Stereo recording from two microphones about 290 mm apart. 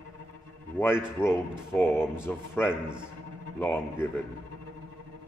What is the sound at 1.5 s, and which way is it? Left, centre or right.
A man's voice, centre.